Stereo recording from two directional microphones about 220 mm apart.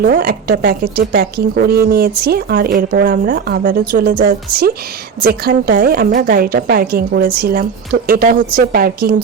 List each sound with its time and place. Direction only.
0.0 s speech: 45° right (ahead or behind)